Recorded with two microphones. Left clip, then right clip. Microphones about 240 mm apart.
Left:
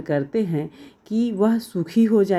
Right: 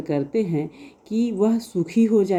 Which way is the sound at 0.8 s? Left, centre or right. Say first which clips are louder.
Even; left.